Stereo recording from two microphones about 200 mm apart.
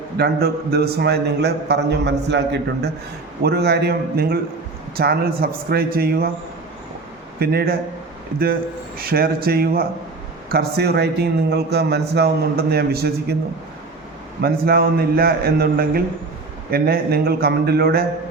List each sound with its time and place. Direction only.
0.2 s speech: 50° right (ahead or behind)
7.3 s speech: 50° right (ahead or behind)
9.0 s speech: 50° right (ahead or behind)
14.4 s speech: 50° right (ahead or behind)